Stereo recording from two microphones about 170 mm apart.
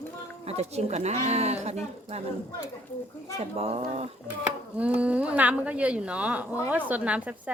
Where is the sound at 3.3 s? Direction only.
40° right (ahead or behind).